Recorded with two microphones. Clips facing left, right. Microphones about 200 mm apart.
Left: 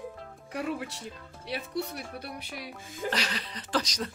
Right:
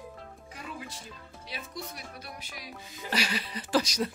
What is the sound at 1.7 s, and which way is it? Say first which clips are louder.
Music: left 7 dB; 60° left (ahead or behind).